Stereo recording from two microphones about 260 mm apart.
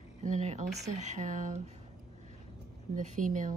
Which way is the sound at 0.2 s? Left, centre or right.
Right.